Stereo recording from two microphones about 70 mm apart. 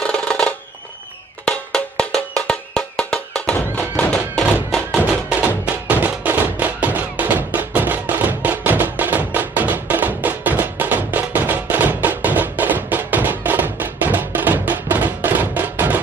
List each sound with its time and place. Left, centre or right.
0.0 s music: centre
4.6 s music: centre
5.9 s music: right